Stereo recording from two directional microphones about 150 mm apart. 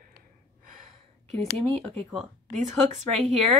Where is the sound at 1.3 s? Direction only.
45° right (ahead or behind).